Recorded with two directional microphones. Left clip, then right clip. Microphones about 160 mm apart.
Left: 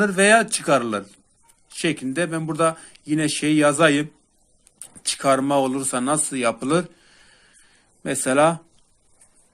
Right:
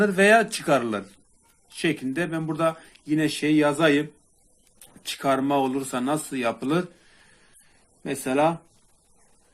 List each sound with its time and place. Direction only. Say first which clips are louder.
0.0 s speech: left 2 dB; 20° left (ahead or behind); by 4.0 s 40° left (ahead or behind)
5.0 s speech: left 4 dB; 35° left (ahead or behind)
8.0 s speech: left 5 dB; 45° left (ahead or behind)